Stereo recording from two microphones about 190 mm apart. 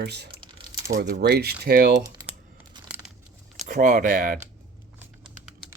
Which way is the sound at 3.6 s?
45° right (ahead or behind).